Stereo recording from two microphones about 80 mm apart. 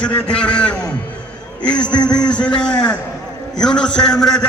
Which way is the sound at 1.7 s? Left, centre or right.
Left.